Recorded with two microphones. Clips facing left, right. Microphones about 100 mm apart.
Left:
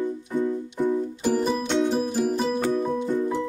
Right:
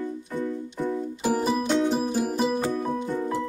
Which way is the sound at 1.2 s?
5° right (ahead or behind).